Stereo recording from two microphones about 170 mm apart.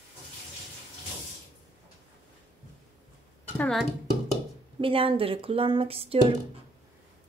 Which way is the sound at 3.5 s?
5° left (ahead or behind).